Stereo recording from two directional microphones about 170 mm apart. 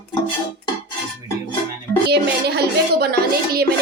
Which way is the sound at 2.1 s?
75° right (ahead or behind).